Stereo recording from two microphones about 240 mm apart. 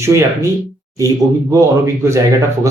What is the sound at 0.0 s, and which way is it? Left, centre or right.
A man's voice, centre.